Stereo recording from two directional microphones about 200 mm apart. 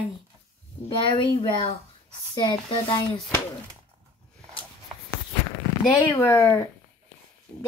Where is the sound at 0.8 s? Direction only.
25° left (ahead or behind).